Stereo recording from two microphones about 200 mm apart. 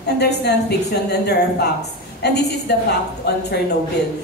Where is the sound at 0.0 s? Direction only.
55° left (ahead or behind).